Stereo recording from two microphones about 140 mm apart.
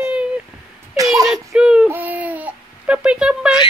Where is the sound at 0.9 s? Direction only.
25° right (ahead or behind).